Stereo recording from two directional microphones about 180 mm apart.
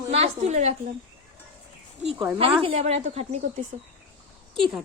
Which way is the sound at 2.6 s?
35° right (ahead or behind).